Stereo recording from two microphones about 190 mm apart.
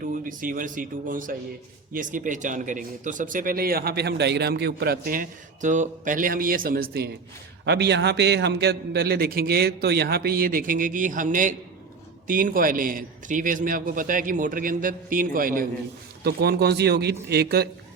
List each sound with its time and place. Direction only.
0.0 s a man's voice: 45° right (ahead or behind)
16.2 s a man's voice: 60° right (ahead or behind)